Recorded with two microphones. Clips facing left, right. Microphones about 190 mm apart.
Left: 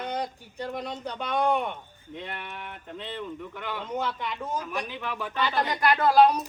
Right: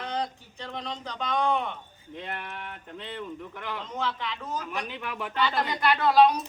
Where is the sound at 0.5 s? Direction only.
10° left (ahead or behind).